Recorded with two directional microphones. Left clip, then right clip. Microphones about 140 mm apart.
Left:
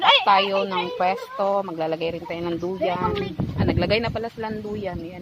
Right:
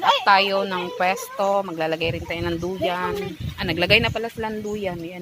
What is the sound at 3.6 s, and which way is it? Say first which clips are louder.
Speech: right 4 dB; 25° right (ahead or behind).